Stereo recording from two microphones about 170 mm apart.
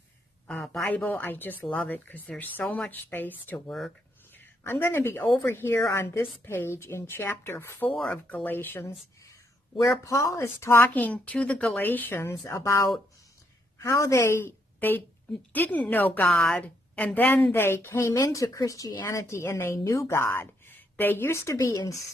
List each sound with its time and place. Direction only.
0.4 s a woman's voice: centre (ahead or behind)
4.6 s a woman's voice: 15° left (ahead or behind)